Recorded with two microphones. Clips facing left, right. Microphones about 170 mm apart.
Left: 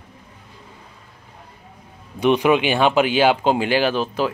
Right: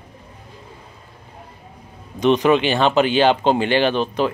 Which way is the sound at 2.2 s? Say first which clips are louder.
Right 1 dB; 10° left (ahead or behind).